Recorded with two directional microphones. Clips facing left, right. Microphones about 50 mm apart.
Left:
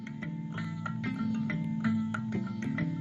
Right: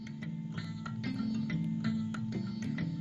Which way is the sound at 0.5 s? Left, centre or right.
Left.